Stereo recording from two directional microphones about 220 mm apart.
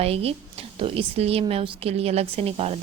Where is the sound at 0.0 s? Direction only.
25° right (ahead or behind).